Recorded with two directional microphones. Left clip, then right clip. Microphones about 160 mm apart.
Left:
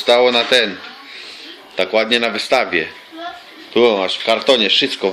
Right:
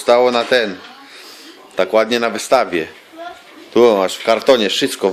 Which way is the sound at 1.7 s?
30° right (ahead or behind).